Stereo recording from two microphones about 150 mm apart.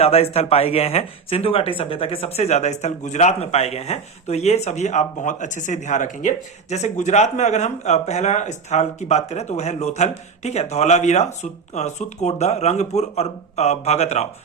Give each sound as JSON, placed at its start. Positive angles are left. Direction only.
{"t": 0.0, "sound": "speech", "side_deg": 40}